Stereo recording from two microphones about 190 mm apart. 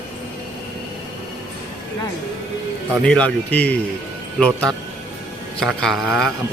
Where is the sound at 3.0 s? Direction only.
5° left (ahead or behind).